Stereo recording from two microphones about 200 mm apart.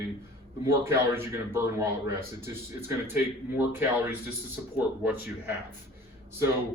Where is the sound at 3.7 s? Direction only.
10° right (ahead or behind).